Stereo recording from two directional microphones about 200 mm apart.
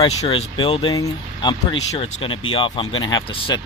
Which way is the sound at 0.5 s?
25° left (ahead or behind).